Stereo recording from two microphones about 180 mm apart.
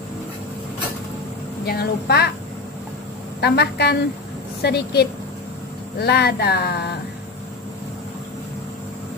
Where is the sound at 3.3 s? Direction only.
65° left (ahead or behind).